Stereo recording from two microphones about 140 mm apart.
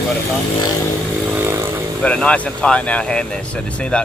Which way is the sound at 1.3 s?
15° right (ahead or behind).